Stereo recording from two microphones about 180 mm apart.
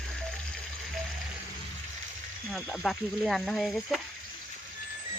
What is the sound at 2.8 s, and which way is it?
Speech, centre (ahead or behind).